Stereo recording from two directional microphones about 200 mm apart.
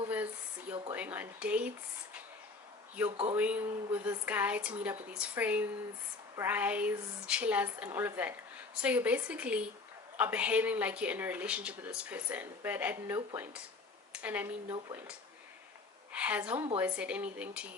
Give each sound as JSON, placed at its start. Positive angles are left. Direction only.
{"t": 0.9, "sound": "speech", "side_deg": -10}
{"t": 3.1, "sound": "speech", "side_deg": -30}
{"t": 3.3, "sound": "speech", "side_deg": -10}
{"t": 16.1, "sound": "speech", "side_deg": -5}